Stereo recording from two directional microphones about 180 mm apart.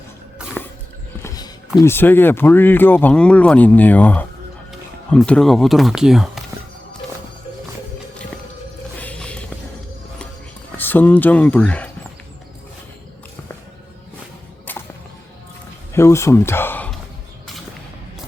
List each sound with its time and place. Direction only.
1.8 s speech: 10° left (ahead or behind)
9.0 s music: 5° left (ahead or behind)
10.8 s speech: 10° left (ahead or behind)
14.7 s whip: 10° left (ahead or behind)
15.9 s speech: 15° left (ahead or behind)